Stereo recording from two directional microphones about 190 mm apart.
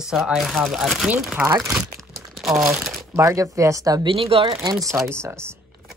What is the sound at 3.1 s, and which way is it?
Speech, 15° right (ahead or behind).